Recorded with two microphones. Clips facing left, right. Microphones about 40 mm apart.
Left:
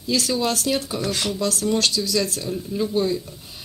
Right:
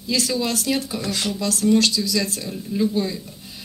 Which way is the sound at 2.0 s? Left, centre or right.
Right.